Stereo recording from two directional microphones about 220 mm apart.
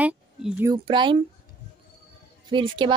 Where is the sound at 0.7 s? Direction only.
20° right (ahead or behind).